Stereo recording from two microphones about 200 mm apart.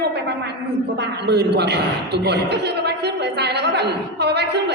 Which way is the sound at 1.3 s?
55° right (ahead or behind).